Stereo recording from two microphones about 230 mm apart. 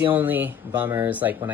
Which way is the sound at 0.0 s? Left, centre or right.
Centre.